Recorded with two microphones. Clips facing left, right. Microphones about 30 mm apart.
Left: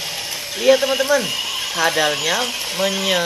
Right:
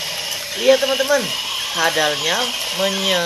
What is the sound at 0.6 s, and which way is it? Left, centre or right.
Speech, centre.